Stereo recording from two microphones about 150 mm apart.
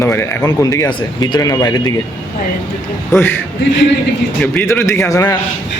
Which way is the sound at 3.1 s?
15° left (ahead or behind).